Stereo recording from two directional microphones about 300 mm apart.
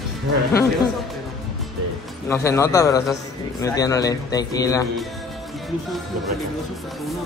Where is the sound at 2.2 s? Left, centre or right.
Centre.